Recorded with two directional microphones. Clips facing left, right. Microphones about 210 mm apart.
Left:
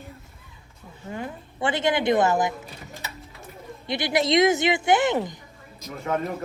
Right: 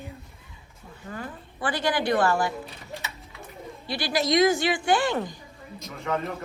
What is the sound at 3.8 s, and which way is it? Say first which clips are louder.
A woman's voice: left 3 dB; 20° left (ahead or behind).